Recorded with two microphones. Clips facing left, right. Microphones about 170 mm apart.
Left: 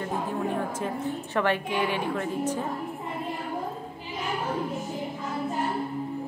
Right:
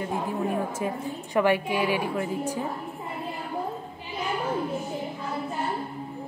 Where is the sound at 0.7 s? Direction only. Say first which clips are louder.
Even; 10° right (ahead or behind).